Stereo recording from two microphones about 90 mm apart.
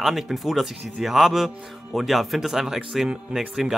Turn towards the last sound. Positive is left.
turn(degrees=-5)  # may be behind; listen again after turning